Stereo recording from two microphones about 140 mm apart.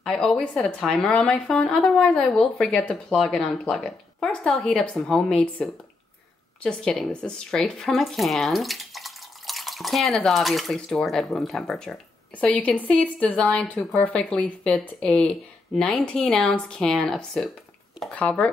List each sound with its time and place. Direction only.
0.0 s speech: 5° left (ahead or behind)